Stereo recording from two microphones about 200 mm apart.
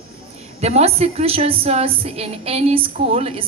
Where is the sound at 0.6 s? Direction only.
30° right (ahead or behind).